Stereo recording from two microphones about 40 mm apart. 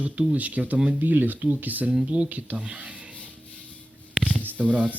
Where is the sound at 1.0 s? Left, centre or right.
Right.